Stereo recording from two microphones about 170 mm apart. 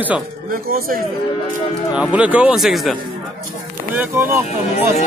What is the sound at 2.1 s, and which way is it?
Speech, 10° right (ahead or behind).